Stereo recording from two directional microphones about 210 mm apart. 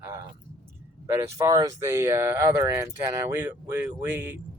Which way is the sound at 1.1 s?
15° right (ahead or behind).